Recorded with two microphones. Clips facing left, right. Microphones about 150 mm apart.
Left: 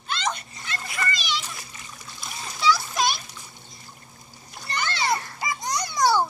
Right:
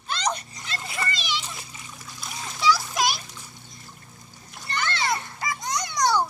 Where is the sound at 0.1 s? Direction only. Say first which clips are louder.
Right 1 dB; 35° right (ahead or behind).